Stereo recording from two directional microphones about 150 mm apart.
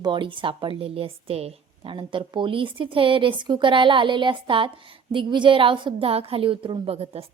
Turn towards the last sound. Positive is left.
turn(degrees=-40)  # may be behind; listen again after turning